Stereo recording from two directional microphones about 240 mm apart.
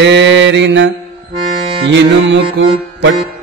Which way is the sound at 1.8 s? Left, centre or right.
Right.